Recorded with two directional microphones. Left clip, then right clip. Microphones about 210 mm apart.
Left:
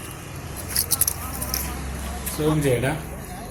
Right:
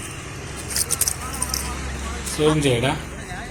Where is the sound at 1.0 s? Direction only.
10° right (ahead or behind).